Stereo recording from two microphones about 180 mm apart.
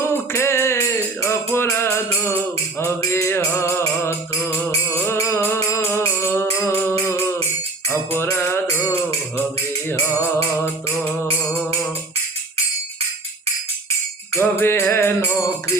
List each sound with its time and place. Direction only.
0.0 s music: 15° left (ahead or behind)
10.5 s music: 10° left (ahead or behind)
14.3 s music: 15° left (ahead or behind)